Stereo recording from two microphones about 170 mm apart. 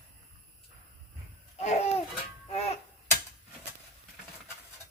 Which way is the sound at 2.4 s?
40° left (ahead or behind).